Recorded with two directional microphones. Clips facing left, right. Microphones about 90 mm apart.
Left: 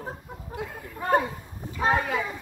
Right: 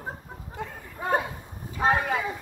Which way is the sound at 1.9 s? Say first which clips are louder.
Even; 5° right (ahead or behind).